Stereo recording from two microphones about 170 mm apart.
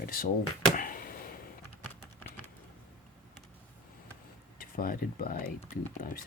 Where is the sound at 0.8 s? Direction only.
55° left (ahead or behind).